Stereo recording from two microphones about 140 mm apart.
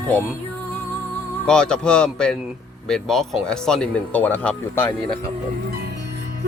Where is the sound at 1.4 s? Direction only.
5° left (ahead or behind).